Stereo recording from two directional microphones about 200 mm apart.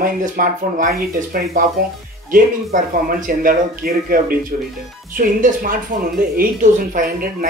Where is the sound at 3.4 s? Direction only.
45° right (ahead or behind).